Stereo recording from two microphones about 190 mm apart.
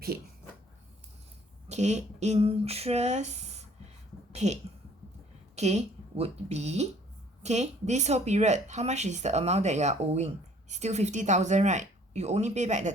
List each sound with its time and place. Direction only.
1.6 s speech: 35° right (ahead or behind)
5.5 s speech: 35° right (ahead or behind)